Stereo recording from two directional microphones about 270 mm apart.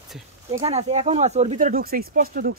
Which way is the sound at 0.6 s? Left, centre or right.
Right.